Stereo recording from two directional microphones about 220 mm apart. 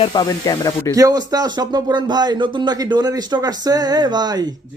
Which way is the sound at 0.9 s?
15° right (ahead or behind).